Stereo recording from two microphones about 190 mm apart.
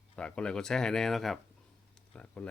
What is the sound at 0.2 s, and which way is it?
Speech, 5° left (ahead or behind).